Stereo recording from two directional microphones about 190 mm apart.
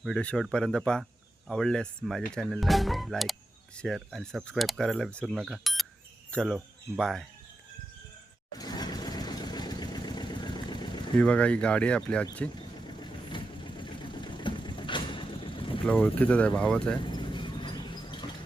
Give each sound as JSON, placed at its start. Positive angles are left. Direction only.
{"t": 0.0, "sound": "speech", "side_deg": 5}
{"t": 8.5, "sound": "vehicle", "side_deg": 20}
{"t": 11.2, "sound": "speech", "side_deg": 5}
{"t": 12.5, "sound": "vehicle", "side_deg": 25}
{"t": 15.9, "sound": "speech", "side_deg": 10}
{"t": 17.0, "sound": "a sound", "side_deg": 25}